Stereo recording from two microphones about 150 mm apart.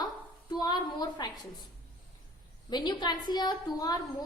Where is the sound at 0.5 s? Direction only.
25° left (ahead or behind).